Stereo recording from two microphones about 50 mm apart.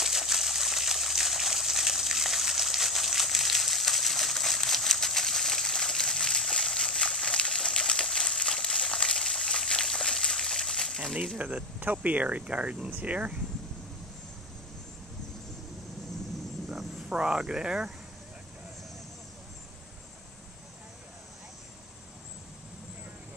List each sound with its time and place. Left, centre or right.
0.0 s water: centre
11.3 s speech: right
17.1 s speech: centre